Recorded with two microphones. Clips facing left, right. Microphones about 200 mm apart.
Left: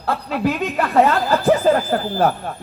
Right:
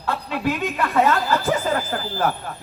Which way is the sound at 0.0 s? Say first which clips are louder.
Left 3 dB; 40° left (ahead or behind).